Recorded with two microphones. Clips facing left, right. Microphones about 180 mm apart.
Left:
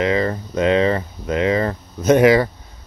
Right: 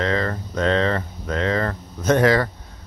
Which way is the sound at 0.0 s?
10° left (ahead or behind).